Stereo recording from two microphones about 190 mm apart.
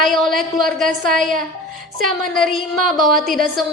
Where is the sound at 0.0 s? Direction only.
Centre (ahead or behind).